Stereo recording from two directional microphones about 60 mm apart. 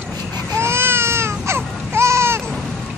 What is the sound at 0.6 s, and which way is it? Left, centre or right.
Baby cry, right.